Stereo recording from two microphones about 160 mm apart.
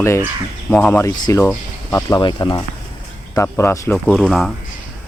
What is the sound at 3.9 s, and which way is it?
Speech, 5° left (ahead or behind).